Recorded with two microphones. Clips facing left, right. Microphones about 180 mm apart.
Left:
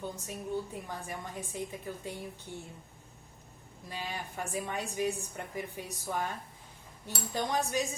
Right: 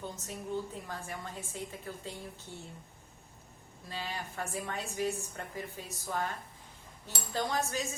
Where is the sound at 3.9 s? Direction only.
15° left (ahead or behind).